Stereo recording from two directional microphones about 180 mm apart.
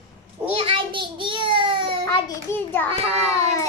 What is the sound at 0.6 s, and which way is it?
Child singing, 30° right (ahead or behind).